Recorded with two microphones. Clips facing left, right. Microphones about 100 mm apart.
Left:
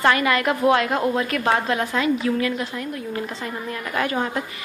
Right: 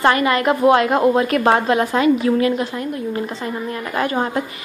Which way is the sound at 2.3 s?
50° right (ahead or behind).